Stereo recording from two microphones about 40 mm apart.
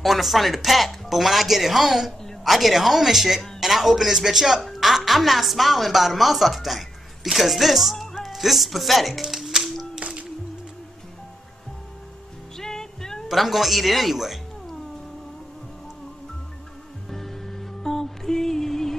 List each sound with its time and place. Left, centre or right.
0.0 s speech: centre
9.2 s music: centre
9.9 s music: right
12.5 s music: centre
13.3 s speech: centre
17.1 s music: centre